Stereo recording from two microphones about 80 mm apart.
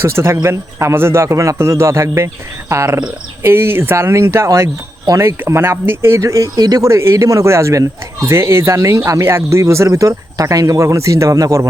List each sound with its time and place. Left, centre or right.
0.0 s speech: right
6.2 s speech: right
6.8 s speech: right